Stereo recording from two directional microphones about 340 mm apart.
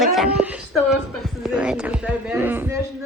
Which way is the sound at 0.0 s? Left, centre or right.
Centre.